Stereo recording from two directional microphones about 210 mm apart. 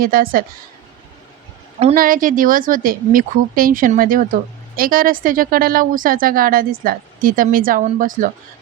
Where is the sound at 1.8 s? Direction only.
40° right (ahead or behind).